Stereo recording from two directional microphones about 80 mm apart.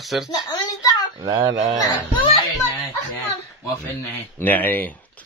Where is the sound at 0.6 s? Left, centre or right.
Left.